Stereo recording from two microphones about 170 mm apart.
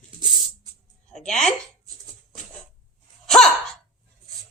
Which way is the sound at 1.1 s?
5° left (ahead or behind).